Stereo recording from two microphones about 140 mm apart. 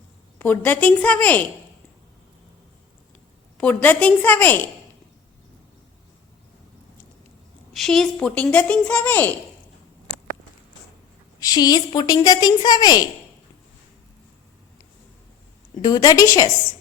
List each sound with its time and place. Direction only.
0.3 s speech: 15° left (ahead or behind)
3.6 s speech: 10° left (ahead or behind)
7.7 s speech: centre (ahead or behind)
11.3 s a woman's voice: 25° left (ahead or behind)
15.8 s a woman's voice: 25° left (ahead or behind)